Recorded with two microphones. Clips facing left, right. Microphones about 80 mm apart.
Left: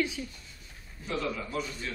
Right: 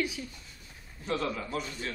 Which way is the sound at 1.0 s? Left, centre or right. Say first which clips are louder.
Right 1 dB; right.